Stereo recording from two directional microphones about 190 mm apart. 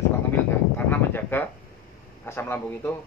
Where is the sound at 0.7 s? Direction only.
10° left (ahead or behind).